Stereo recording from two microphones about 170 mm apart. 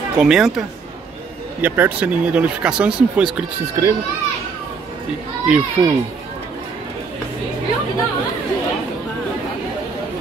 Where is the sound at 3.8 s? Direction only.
20° right (ahead or behind).